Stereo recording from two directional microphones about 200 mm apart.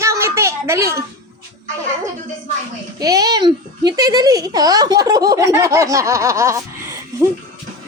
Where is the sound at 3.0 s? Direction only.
20° right (ahead or behind).